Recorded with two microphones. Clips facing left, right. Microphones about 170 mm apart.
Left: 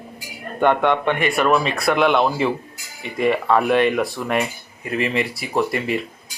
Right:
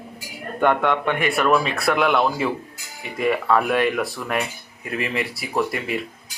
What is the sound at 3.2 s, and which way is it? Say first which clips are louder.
Speech: left 2 dB; 25° left (ahead or behind).